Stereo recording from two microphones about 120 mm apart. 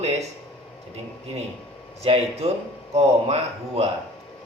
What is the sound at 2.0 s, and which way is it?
Speech, 60° right (ahead or behind).